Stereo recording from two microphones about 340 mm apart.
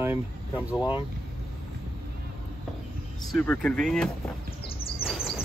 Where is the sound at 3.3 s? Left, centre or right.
Centre.